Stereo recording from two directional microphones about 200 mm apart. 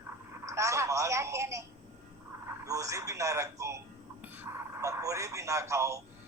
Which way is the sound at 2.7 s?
15° right (ahead or behind).